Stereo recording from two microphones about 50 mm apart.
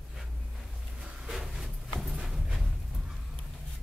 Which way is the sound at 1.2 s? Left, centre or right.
Centre.